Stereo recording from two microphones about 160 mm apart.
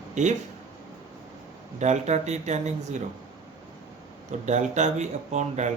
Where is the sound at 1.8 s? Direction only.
45° right (ahead or behind).